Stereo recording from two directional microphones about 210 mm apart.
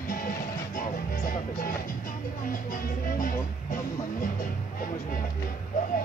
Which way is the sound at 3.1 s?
40° left (ahead or behind).